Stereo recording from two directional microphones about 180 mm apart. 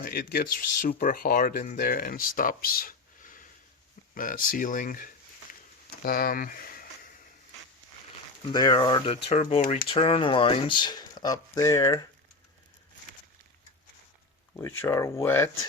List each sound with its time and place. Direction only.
0.0 s speech: 55° left (ahead or behind)
8.5 s speech: 20° left (ahead or behind)
14.8 s speech: 15° left (ahead or behind)